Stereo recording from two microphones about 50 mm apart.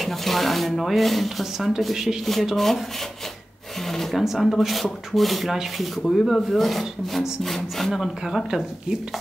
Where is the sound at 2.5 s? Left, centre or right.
Centre.